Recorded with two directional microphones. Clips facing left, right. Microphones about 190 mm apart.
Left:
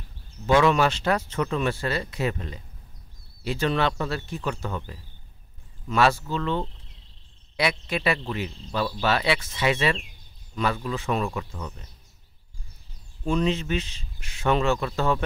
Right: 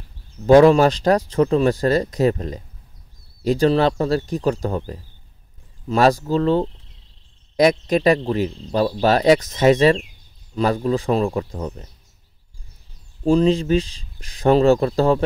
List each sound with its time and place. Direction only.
0.5 s speech: 40° right (ahead or behind)
13.2 s speech: 35° right (ahead or behind)